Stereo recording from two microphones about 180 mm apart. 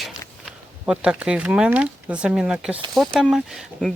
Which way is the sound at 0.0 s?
5° right (ahead or behind).